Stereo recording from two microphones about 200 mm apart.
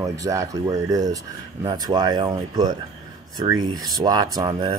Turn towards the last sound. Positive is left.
turn(degrees=-25)  # may be behind; listen again after turning